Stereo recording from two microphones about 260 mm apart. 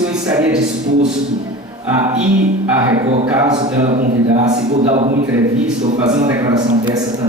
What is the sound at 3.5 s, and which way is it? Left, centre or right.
A man's voice, right.